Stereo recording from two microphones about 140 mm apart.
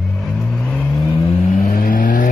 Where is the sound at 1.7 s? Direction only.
80° left.